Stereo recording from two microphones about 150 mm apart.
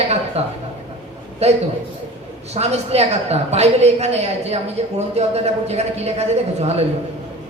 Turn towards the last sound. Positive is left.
turn(degrees=-45)  # may be behind; listen again after turning